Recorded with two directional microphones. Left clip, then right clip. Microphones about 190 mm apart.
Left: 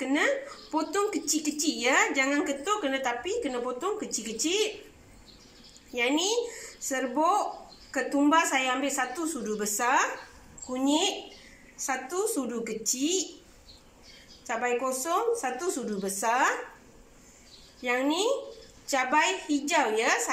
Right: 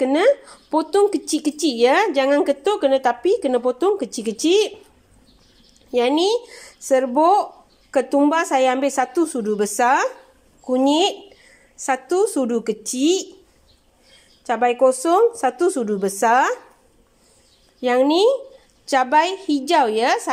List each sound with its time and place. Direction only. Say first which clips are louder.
0.0 s a woman's voice: right 11 dB; 50° right (ahead or behind)
5.9 s a woman's voice: right 10 dB; 50° right (ahead or behind)
14.4 s a woman's voice: right 12 dB; 60° right (ahead or behind)
17.8 s a woman's voice: right 11 dB; 55° right (ahead or behind)